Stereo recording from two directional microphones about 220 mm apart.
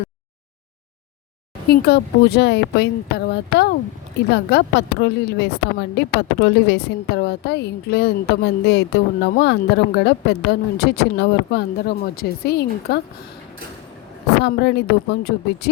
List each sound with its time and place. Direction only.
1.7 s a woman's voice: 45° left (ahead or behind)
14.3 s a woman's voice: 50° left (ahead or behind)